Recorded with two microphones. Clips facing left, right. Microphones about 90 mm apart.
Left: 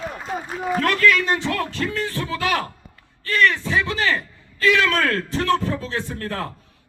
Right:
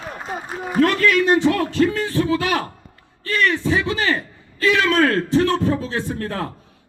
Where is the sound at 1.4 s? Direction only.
20° right (ahead or behind).